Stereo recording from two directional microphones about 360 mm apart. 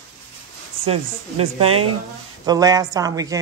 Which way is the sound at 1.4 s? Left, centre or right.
Centre.